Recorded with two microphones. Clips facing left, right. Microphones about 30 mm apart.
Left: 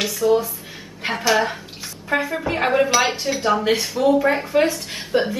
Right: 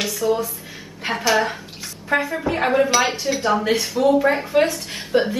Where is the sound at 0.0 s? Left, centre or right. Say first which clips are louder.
Left 3 dB; centre.